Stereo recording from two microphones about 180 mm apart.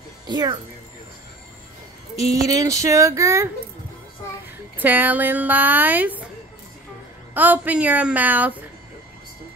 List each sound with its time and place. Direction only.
0.3 s speech: 25° right (ahead or behind)
2.3 s a woman's voice: 20° right (ahead or behind)
4.7 s a woman's voice: 10° right (ahead or behind)
7.3 s a woman's voice: 10° right (ahead or behind)